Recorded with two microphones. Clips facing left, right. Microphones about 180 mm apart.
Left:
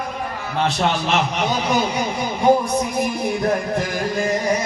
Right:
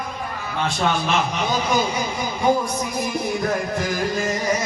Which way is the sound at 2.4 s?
60° left (ahead or behind).